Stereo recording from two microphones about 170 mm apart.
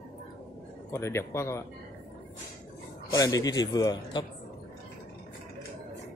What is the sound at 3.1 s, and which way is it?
A man's voice, 20° left (ahead or behind).